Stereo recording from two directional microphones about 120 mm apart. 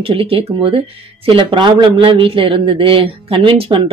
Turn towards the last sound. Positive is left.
turn(degrees=-45)  # may be behind; listen again after turning